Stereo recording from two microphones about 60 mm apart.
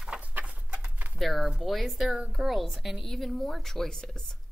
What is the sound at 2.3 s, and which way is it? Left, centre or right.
Speech, centre.